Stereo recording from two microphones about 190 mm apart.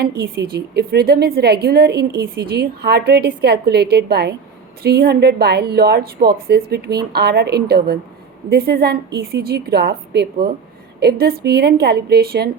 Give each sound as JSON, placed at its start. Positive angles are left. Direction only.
{"t": 0.0, "sound": "a woman's voice", "side_deg": -55}